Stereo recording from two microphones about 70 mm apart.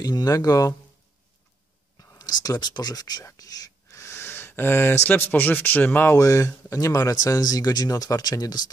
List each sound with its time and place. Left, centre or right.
0.0 s speech: left
2.1 s speech: left
3.3 s whispering: left
4.0 s speech: left
6.1 s speech: left